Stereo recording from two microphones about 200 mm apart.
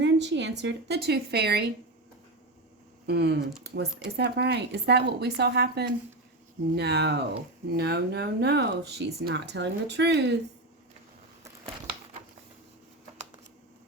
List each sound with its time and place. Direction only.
0.0 s speech: 60° right (ahead or behind)
3.1 s speech: 55° right (ahead or behind)